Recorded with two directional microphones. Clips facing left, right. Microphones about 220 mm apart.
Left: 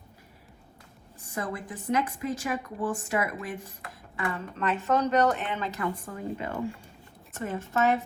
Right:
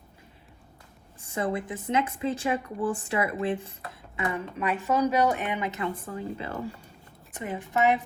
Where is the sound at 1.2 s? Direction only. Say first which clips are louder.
Right 5 dB; 25° right (ahead or behind).